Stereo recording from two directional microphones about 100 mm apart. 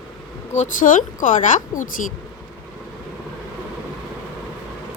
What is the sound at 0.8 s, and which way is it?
Speech, 90° left.